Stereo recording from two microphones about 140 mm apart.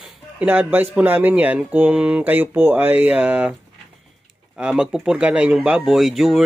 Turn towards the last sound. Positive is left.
turn(degrees=0)  # may be behind; listen again after turning